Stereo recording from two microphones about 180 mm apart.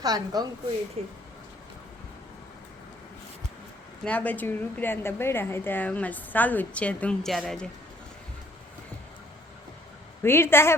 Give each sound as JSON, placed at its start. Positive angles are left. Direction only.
{"t": 0.0, "sound": "a woman's voice", "side_deg": -20}
{"t": 1.0, "sound": "speech", "side_deg": -35}
{"t": 4.0, "sound": "a woman's voice", "side_deg": 10}
{"t": 10.2, "sound": "a woman's voice", "side_deg": 15}